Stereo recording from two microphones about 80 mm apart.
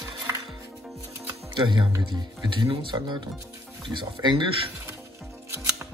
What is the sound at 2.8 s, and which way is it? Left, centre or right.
Speech, right.